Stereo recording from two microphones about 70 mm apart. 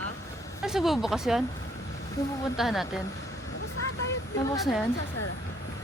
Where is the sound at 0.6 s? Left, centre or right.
Centre.